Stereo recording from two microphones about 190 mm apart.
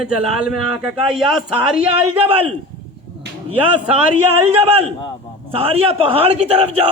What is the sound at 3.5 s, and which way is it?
A man's voice, 25° right (ahead or behind).